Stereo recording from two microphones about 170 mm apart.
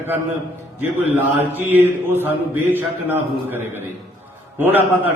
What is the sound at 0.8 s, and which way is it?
A man's voice, 10° right (ahead or behind).